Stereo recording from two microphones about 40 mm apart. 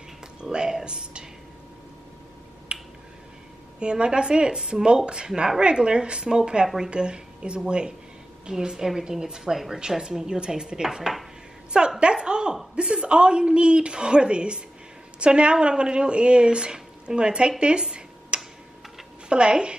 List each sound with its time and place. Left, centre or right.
0.4 s a woman's voice: right
2.7 s finger snapping: right
3.8 s a woman's voice: right
12.0 s a sound: right
12.7 s a woman's voice: right
18.3 s tick-tock: right
19.2 s a woman's voice: right